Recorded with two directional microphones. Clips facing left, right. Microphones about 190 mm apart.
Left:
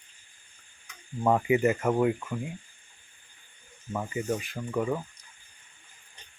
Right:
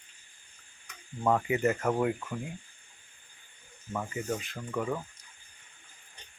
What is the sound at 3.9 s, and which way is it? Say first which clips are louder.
Speech: left 3 dB; 10° left (ahead or behind).